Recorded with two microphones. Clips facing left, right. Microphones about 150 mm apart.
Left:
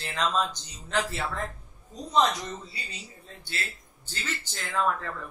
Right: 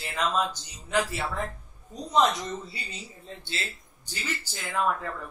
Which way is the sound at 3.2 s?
25° right (ahead or behind).